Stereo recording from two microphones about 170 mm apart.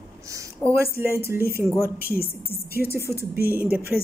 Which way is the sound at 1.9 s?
65° left (ahead or behind).